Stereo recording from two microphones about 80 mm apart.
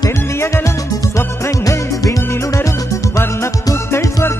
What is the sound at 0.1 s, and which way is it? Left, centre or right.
Music, left.